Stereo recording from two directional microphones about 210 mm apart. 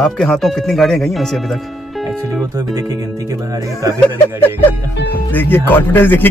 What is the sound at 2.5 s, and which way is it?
Speech, 15° right (ahead or behind).